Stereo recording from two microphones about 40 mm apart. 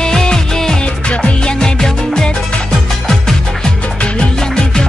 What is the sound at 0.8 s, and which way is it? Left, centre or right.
Music, left.